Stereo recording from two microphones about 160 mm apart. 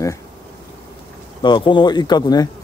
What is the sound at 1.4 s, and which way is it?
Speech, 30° left (ahead or behind).